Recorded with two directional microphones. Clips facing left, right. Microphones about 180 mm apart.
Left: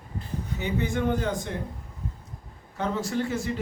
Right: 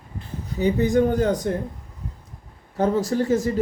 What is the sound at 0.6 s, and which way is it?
Speech, 40° right (ahead or behind).